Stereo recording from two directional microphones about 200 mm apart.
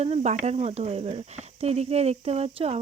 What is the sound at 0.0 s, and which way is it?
Speech, 35° right (ahead or behind).